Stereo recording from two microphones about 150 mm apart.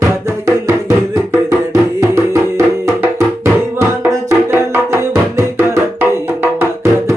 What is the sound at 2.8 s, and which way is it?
Music, 20° right (ahead or behind).